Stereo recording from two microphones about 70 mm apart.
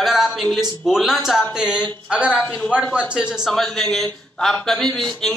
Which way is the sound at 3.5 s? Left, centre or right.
Centre.